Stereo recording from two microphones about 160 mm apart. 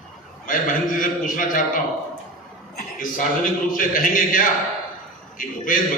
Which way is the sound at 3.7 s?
55° left (ahead or behind).